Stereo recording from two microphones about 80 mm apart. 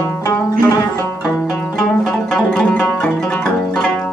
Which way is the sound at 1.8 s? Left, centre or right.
Centre.